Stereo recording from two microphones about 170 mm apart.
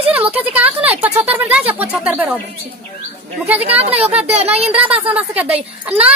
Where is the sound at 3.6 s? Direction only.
35° right (ahead or behind).